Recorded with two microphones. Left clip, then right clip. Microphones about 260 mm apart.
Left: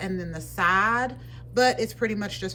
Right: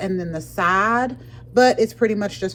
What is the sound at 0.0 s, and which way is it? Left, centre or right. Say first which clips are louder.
Speech: right 7 dB; centre.